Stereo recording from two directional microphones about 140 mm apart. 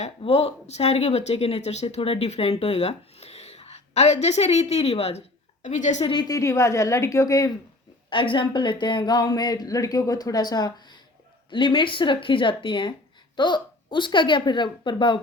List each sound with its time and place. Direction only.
0.2 s speech: 45° left (ahead or behind)
5.6 s a woman's voice: 60° left (ahead or behind)
6.1 s speech: 30° left (ahead or behind)
8.1 s speech: 35° left (ahead or behind)